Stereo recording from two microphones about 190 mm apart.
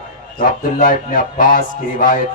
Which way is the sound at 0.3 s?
45° left (ahead or behind).